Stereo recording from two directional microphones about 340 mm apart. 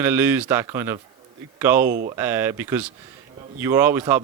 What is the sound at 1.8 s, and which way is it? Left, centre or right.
Speech, right.